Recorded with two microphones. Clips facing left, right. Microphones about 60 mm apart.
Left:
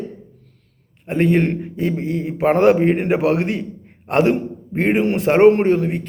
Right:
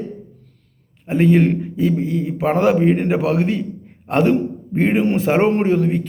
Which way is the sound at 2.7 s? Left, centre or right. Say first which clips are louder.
Even; centre.